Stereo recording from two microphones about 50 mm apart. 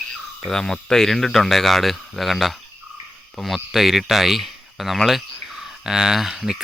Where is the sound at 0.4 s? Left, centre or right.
Centre.